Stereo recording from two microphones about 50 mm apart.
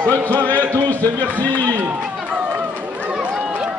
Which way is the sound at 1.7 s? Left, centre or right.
Right.